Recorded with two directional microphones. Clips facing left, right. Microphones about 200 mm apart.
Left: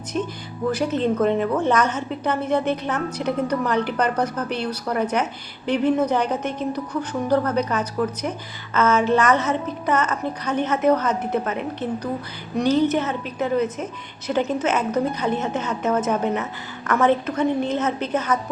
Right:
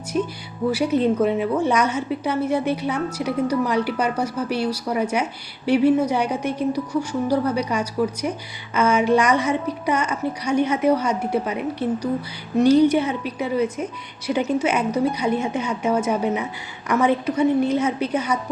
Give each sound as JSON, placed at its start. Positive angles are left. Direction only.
{"t": 0.1, "sound": "a woman's voice", "side_deg": -10}